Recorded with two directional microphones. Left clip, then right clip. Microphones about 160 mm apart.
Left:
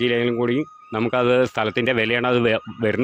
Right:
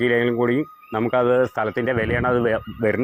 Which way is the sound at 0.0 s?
20° left (ahead or behind).